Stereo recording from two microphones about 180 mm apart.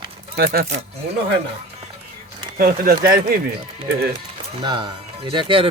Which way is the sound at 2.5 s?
55° right (ahead or behind).